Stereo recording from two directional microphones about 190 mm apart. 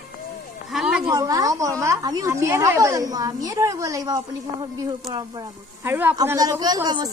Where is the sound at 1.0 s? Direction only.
20° right (ahead or behind).